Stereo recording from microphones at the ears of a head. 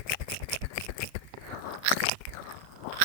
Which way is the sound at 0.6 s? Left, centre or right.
Left.